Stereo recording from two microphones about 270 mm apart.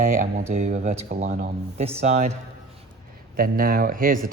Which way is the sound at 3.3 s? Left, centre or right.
Right.